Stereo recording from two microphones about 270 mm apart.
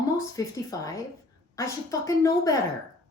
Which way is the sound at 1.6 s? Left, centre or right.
Centre.